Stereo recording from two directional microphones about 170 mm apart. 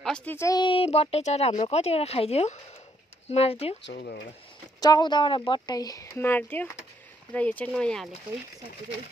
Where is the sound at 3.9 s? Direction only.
75° left (ahead or behind).